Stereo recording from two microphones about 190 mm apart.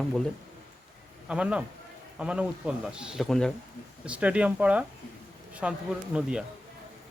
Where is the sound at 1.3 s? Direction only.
5° right (ahead or behind).